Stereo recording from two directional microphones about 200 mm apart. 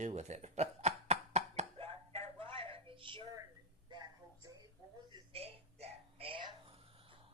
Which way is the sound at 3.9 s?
20° right (ahead or behind).